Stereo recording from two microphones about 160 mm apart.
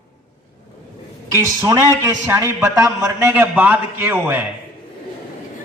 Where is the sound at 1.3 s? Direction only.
20° right (ahead or behind).